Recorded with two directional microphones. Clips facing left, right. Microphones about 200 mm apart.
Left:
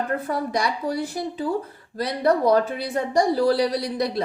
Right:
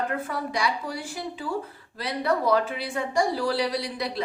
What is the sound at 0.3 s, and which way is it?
Speech, 40° left (ahead or behind).